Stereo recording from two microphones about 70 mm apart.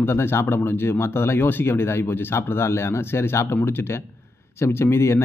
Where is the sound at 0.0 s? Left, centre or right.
Left.